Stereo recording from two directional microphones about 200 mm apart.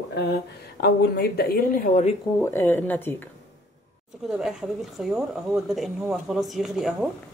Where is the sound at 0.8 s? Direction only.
50° left (ahead or behind).